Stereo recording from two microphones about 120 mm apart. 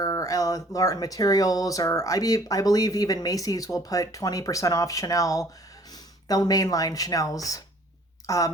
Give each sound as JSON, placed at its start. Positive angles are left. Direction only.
{"t": 0.0, "sound": "speech", "side_deg": 30}